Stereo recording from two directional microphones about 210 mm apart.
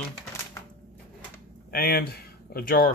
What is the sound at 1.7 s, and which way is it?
Speech, 45° left (ahead or behind).